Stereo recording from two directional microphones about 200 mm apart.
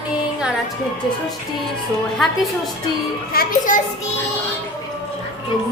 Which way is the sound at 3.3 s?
50° left (ahead or behind).